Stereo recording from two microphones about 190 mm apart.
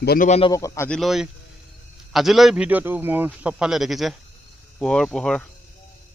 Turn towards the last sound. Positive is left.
turn(degrees=5)  # may be behind; listen again after turning